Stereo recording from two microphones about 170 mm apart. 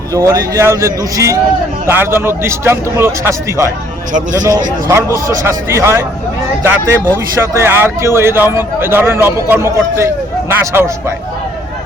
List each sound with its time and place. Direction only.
0.1 s speech: 20° right (ahead or behind)
4.9 s speech: 15° right (ahead or behind)